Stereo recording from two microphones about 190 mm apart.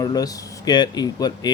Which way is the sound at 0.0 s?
20° left (ahead or behind).